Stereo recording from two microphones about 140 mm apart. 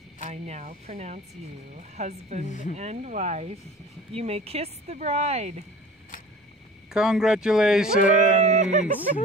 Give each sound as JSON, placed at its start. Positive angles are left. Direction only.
{"t": 0.2, "sound": "speech", "side_deg": -55}
{"t": 2.4, "sound": "speech", "side_deg": 60}
{"t": 2.7, "sound": "speech", "side_deg": -50}
{"t": 6.9, "sound": "speech", "side_deg": -5}
{"t": 8.5, "sound": "speech", "side_deg": -55}